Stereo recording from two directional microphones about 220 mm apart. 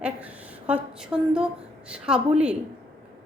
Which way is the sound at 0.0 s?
5° right (ahead or behind).